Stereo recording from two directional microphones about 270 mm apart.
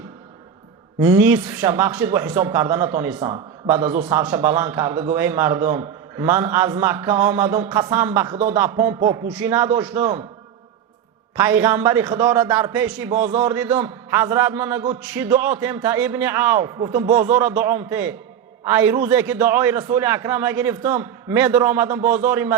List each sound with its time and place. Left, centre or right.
0.9 s a man's voice: centre
11.3 s a man's voice: centre